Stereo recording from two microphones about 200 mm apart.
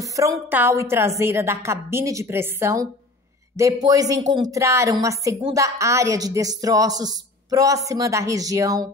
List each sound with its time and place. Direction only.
0.0 s a woman's voice: 15° right (ahead or behind)